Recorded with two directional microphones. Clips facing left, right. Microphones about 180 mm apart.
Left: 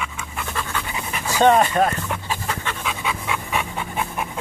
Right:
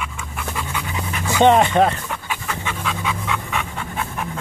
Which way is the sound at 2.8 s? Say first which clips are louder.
Right 2 dB; 10° left (ahead or behind).